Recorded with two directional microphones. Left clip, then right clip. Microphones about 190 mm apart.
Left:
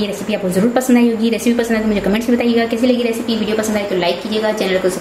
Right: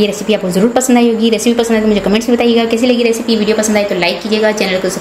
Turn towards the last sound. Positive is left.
turn(degrees=-40)  # may be behind; listen again after turning